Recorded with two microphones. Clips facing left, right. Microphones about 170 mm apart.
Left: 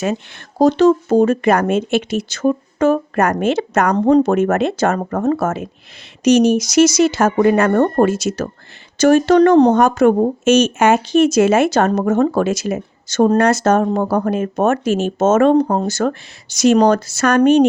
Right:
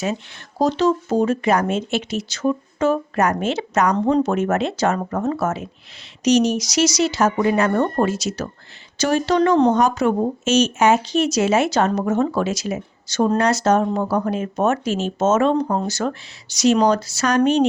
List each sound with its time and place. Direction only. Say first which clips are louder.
0.6 s speech: left 6 dB; 55° left (ahead or behind)